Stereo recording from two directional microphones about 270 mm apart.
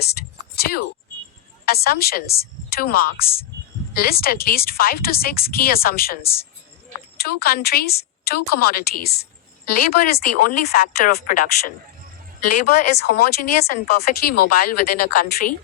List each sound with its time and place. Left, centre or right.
0.5 s a sound: left
1.6 s a woman's voice: left
12.4 s a woman's voice: left
13.0 s a woman's voice: left